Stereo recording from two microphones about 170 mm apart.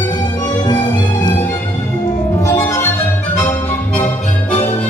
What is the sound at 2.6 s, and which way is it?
Music, 15° left (ahead or behind).